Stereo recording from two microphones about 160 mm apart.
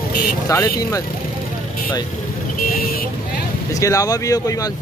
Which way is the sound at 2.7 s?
65° left (ahead or behind).